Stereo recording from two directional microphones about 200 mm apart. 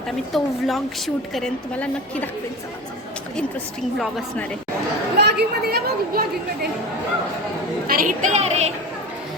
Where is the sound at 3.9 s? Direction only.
Centre (ahead or behind).